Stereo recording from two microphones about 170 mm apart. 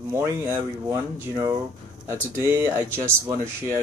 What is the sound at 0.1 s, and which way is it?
Speech, 15° right (ahead or behind).